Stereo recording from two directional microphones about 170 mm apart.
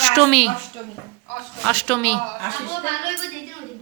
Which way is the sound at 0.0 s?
5° left (ahead or behind).